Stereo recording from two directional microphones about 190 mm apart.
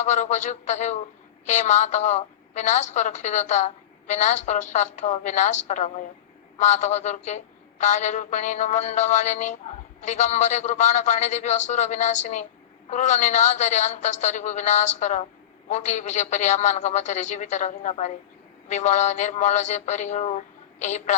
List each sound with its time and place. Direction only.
0.0 s a woman's voice: 40° left (ahead or behind)